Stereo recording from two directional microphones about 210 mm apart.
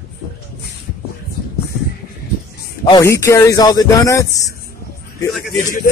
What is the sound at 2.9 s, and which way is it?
Speech, 15° left (ahead or behind).